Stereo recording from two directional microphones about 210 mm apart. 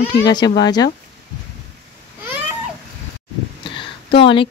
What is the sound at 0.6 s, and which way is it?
Speech, 20° left (ahead or behind).